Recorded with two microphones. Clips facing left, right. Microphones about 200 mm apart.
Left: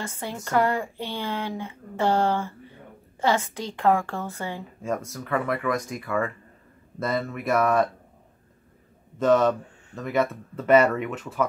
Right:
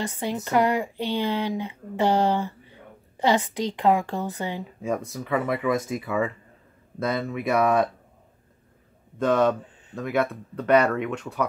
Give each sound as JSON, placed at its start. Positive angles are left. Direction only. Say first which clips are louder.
{"t": 0.0, "sound": "speech", "louder": "right 5 dB", "side_deg": -20}
{"t": 4.8, "sound": "speech", "louder": "right 1 dB", "side_deg": 0}
{"t": 5.6, "sound": "speech", "louder": "right 3 dB", "side_deg": -25}
{"t": 5.9, "sound": "speech", "louder": "right 1 dB", "side_deg": -5}
{"t": 9.9, "sound": "speech", "louder": "even", "side_deg": 0}